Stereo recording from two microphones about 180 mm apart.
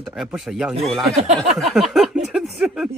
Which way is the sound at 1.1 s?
40° right (ahead or behind).